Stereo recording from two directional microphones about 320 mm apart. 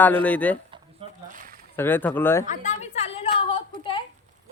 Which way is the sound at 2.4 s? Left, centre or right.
Left.